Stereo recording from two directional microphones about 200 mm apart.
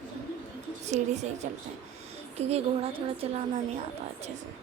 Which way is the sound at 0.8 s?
35° right (ahead or behind).